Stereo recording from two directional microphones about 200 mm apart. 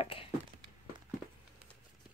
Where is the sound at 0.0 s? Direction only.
25° left (ahead or behind).